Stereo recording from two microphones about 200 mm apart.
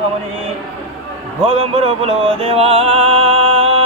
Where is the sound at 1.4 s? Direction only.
30° right (ahead or behind).